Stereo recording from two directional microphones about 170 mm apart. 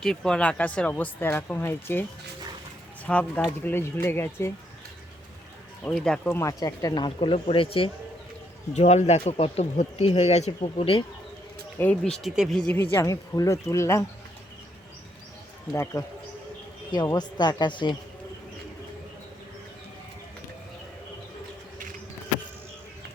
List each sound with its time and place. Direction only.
0.0 s speech: 5° left (ahead or behind)
3.1 s speech: 10° left (ahead or behind)
5.9 s speech: 5° left (ahead or behind); by 7.9 s 30° left (ahead or behind)
8.7 s speech: 40° left (ahead or behind)
11.8 s speech: 5° left (ahead or behind)
15.7 s speech: 15° left (ahead or behind)
16.9 s speech: 25° left (ahead or behind)